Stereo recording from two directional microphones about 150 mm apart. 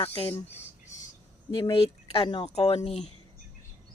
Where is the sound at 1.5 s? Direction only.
35° left (ahead or behind).